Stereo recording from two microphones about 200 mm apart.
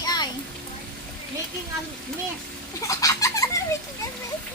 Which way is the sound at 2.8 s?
15° left (ahead or behind).